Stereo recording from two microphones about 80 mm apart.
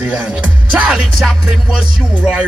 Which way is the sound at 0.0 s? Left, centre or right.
Centre.